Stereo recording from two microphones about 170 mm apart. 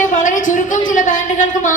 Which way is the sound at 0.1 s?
50° left (ahead or behind).